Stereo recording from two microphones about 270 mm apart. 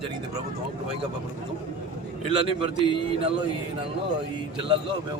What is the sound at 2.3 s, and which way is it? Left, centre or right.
Speech, centre.